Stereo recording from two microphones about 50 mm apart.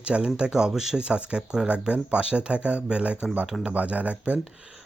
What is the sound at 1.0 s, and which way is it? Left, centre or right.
Speech, right.